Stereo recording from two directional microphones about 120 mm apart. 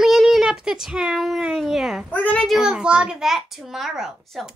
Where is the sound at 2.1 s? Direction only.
10° left (ahead or behind).